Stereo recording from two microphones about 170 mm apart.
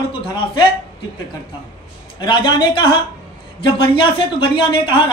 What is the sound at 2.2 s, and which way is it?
A woman's voice, 25° left (ahead or behind).